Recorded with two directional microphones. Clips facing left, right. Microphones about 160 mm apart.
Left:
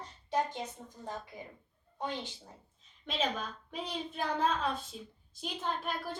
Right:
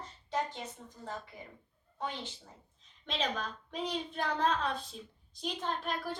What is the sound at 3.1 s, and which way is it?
A child's voice, 5° left (ahead or behind).